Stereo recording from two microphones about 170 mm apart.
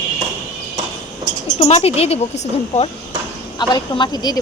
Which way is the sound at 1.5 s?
35° left (ahead or behind).